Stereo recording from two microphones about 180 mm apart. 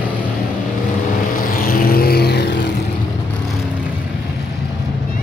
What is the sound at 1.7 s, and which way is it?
Vehicle, 55° left (ahead or behind).